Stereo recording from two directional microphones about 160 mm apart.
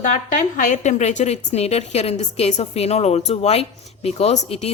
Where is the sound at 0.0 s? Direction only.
55° left (ahead or behind).